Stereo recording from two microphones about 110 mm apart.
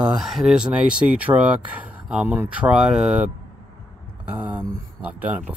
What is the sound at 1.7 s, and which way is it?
Speech, 10° right (ahead or behind).